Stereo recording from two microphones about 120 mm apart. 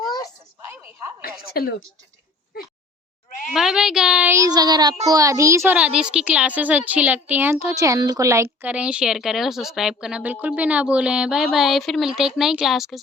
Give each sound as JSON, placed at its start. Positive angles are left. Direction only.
{"t": 0.7, "sound": "a sound", "side_deg": -15}
{"t": 3.5, "sound": "speech", "side_deg": -5}
{"t": 4.3, "sound": "child singing", "side_deg": -30}
{"t": 5.0, "sound": "a child's voice", "side_deg": -30}
{"t": 5.7, "sound": "a child's voice", "side_deg": -5}
{"t": 8.6, "sound": "a child's voice", "side_deg": -10}